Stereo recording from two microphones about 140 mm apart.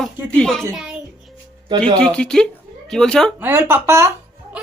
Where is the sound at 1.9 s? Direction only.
5° left (ahead or behind).